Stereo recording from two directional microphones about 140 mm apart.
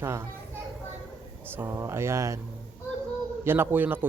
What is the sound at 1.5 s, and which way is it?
Speech, 20° right (ahead or behind).